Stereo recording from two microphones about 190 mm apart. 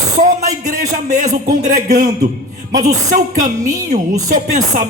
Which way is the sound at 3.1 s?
45° right (ahead or behind).